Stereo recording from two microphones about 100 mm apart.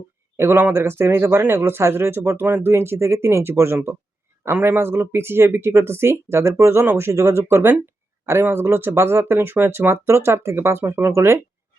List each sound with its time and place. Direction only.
0.3 s speech: 25° right (ahead or behind)